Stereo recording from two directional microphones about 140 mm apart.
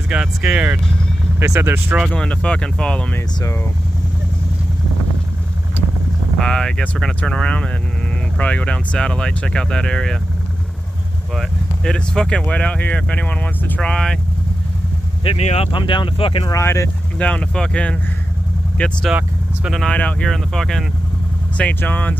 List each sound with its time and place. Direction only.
0.1 s speech: 10° right (ahead or behind)
2.1 s speech: 10° left (ahead or behind)
6.4 s speech: 5° left (ahead or behind)
11.3 s speech: 5° left (ahead or behind)
15.2 s speech: 45° left (ahead or behind)
16.4 s speech: 20° left (ahead or behind)
17.3 s speech: 10° left (ahead or behind)
19.0 s speech: 5° right (ahead or behind)
19.8 s speech: 10° left (ahead or behind)